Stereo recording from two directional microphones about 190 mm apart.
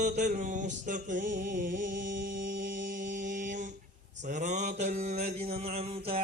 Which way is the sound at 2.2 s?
45° right (ahead or behind).